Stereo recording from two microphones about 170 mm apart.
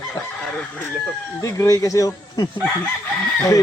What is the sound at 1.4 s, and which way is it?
Speech, 20° left (ahead or behind).